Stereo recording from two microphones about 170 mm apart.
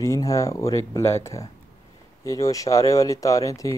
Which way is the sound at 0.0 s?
20° left (ahead or behind).